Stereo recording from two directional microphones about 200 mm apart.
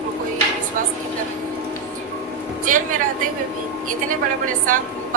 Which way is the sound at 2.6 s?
40° right (ahead or behind).